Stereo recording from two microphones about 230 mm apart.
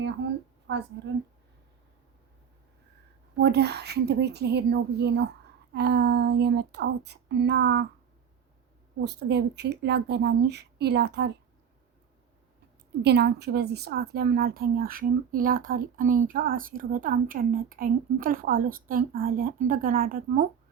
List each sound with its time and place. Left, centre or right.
0.7 s speech: right
3.3 s speech: right
9.0 s speech: right
13.0 s a woman's voice: right